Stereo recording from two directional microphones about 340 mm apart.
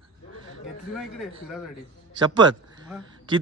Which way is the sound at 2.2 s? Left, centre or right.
Centre.